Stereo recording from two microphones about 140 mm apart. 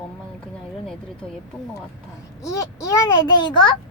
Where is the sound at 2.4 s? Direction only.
25° left (ahead or behind).